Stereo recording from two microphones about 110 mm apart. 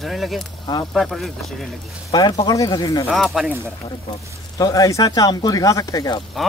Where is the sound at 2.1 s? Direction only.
40° left (ahead or behind).